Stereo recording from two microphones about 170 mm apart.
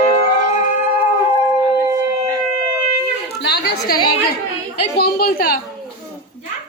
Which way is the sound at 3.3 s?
75° left (ahead or behind).